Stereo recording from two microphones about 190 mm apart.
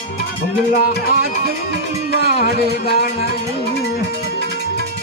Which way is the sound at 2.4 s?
50° left (ahead or behind).